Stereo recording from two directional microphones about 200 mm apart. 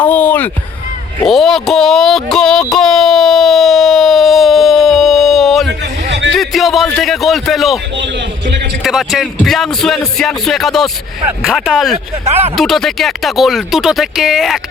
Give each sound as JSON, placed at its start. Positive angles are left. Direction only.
{"t": 0.0, "sound": "music", "side_deg": 10}
{"t": 1.2, "sound": "a sound", "side_deg": 0}
{"t": 6.1, "sound": "music", "side_deg": -65}
{"t": 6.3, "sound": "a sound", "side_deg": 0}
{"t": 8.8, "sound": "speech", "side_deg": 0}
{"t": 12.2, "sound": "speech", "side_deg": -30}
{"t": 12.5, "sound": "speech", "side_deg": 0}